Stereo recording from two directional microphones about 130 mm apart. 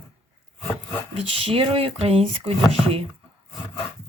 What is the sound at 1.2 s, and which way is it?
Speech, 45° right (ahead or behind).